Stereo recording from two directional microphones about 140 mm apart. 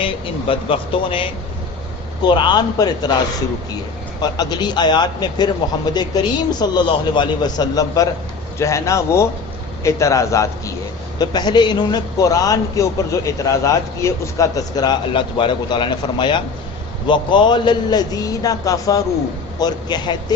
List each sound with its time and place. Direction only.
0.0 s a man's voice: 40° left (ahead or behind)
4.2 s a man's voice: 30° left (ahead or behind)